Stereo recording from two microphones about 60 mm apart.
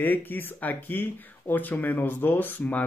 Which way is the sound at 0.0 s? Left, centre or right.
Left.